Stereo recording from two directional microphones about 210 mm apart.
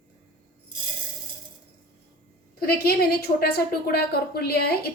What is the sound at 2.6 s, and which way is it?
A woman's voice, 45° left (ahead or behind).